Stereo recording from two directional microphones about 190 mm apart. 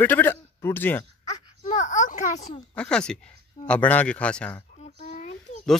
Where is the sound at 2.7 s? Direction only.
5° left (ahead or behind).